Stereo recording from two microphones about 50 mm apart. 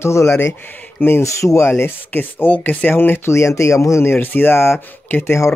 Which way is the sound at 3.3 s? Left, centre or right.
Left.